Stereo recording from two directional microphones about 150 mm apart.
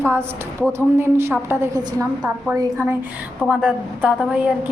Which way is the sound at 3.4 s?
5° right (ahead or behind).